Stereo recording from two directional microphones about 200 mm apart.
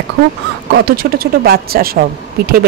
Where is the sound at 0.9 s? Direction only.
50° right (ahead or behind).